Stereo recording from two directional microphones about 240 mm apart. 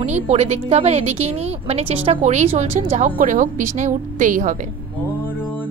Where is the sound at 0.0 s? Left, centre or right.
Right.